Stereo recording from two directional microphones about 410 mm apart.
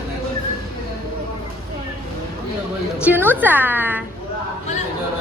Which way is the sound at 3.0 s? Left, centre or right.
Centre.